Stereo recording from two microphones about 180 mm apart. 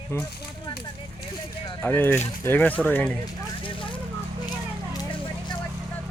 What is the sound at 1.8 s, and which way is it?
Speech, 10° left (ahead or behind).